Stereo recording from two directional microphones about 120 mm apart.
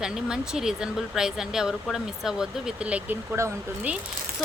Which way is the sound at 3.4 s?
25° right (ahead or behind).